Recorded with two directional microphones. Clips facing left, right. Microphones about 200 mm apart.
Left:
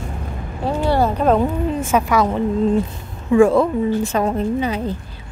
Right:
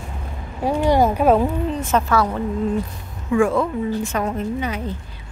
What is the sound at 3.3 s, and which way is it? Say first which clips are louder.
A woman's voice: left 5 dB; 35° left (ahead or behind).